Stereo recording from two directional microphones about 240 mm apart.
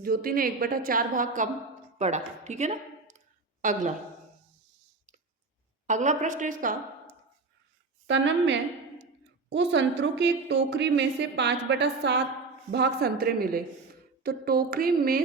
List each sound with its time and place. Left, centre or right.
0.0 s a woman's voice: right
5.9 s a woman's voice: right
8.0 s a woman's voice: right